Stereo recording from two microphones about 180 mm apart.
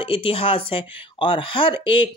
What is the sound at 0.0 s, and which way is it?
Speech, 30° left (ahead or behind).